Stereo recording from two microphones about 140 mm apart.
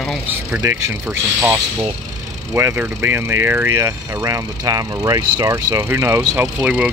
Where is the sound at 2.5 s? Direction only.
20° right (ahead or behind).